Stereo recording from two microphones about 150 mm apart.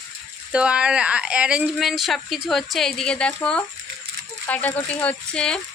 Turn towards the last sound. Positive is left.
turn(degrees=5)  # may be behind; listen again after turning